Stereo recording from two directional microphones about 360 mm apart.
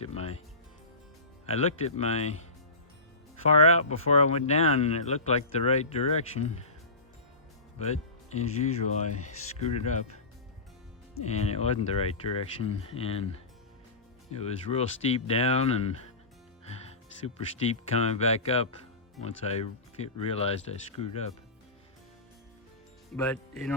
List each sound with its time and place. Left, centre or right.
0.0 s music: centre
1.5 s speech: centre
3.5 s speech: centre
7.8 s speech: centre
11.1 s speech: centre
16.6 s music: centre
17.9 s speech: centre
23.1 s speech: centre